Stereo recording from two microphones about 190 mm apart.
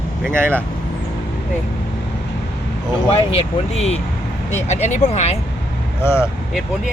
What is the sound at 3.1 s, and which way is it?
Speech, 30° left (ahead or behind).